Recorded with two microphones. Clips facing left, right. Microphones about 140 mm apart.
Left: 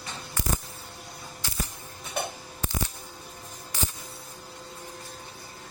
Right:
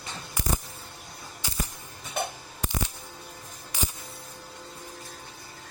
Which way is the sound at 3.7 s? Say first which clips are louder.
Even; 15° right (ahead or behind).